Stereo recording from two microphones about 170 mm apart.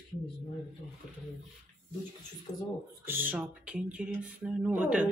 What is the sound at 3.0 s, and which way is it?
Speech, 10° right (ahead or behind).